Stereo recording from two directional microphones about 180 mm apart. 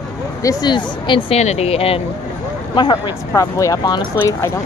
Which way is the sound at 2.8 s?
20° left (ahead or behind).